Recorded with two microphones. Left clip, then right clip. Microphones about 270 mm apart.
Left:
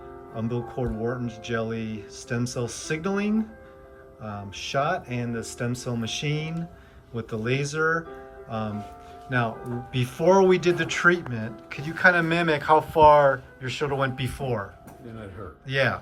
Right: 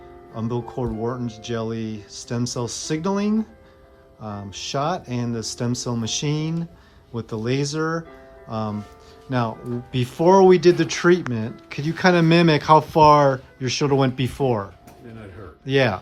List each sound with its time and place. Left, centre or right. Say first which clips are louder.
0.3 s speech: right 3 dB; centre
9.9 s speech: right 4 dB; centre